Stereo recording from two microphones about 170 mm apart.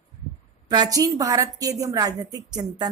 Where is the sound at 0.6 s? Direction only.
25° right (ahead or behind).